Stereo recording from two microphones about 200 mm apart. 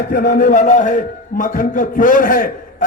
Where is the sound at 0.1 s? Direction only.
45° left (ahead or behind).